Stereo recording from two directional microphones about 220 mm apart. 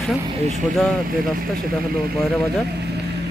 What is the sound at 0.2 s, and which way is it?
Speech, 25° right (ahead or behind).